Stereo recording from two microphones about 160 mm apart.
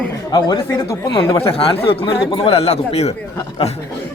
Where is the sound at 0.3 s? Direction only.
25° left (ahead or behind); by 3.2 s 40° left (ahead or behind).